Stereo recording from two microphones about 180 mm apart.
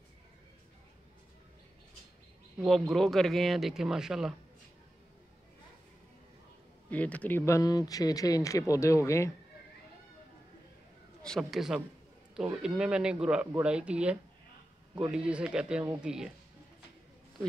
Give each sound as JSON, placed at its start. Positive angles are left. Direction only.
{"t": 2.6, "sound": "speech", "side_deg": 0}
{"t": 6.9, "sound": "speech", "side_deg": 10}
{"t": 11.2, "sound": "speech", "side_deg": 0}